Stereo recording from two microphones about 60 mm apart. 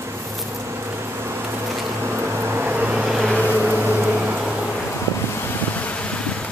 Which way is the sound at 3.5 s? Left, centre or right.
Right.